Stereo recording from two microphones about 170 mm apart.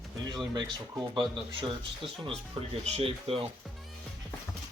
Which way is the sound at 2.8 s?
35° right (ahead or behind).